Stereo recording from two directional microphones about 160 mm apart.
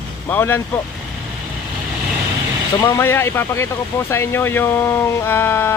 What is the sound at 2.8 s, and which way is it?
Speech, 15° left (ahead or behind).